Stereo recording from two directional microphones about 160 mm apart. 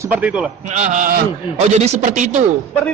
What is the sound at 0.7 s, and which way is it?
A man's voice, 45° right (ahead or behind).